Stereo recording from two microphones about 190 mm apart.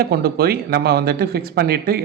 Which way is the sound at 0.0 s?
55° right (ahead or behind).